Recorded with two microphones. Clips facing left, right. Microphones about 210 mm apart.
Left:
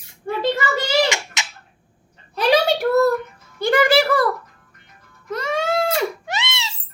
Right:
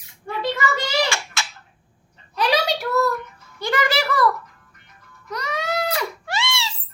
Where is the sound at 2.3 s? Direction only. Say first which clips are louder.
Left 4 dB; 50° left (ahead or behind).